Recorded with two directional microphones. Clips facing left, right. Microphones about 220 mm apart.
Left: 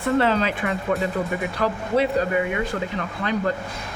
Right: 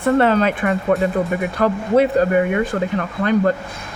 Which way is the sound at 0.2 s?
55° right (ahead or behind).